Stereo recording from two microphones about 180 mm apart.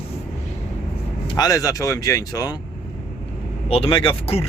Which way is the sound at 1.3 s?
20° left (ahead or behind).